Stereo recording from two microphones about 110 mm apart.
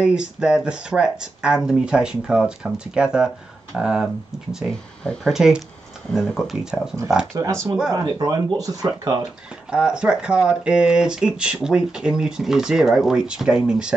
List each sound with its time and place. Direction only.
0.0 s speech: 5° right (ahead or behind)
7.3 s speech: 30° right (ahead or behind)
9.7 s speech: 10° right (ahead or behind)